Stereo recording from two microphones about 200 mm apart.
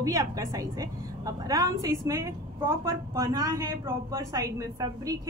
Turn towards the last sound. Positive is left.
turn(degrees=-15)  # may be behind; listen again after turning